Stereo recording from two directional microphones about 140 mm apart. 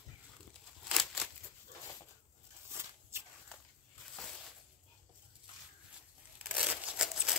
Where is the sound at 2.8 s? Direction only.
15° right (ahead or behind).